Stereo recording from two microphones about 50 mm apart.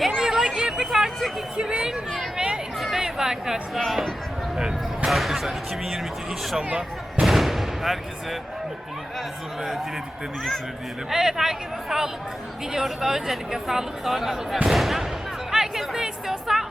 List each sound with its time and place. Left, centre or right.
0.2 s a sound: centre
3.0 s chatter: centre
3.8 s speech: centre
5.0 s a sound: centre
6.6 s speech: centre
7.2 s artillery fire: centre
11.1 s speech: centre
15.5 s music: centre